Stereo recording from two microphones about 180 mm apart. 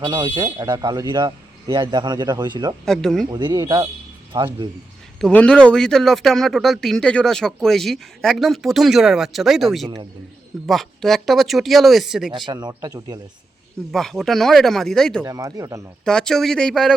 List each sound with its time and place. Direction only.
0.0 s speech: 25° right (ahead or behind)
2.8 s speech: centre (ahead or behind)
3.2 s speech: 25° right (ahead or behind)
5.2 s speech: 5° left (ahead or behind)
12.5 s speech: 25° right (ahead or behind)
13.9 s speech: centre (ahead or behind)
15.2 s speech: 20° right (ahead or behind)
16.0 s speech: 5° left (ahead or behind)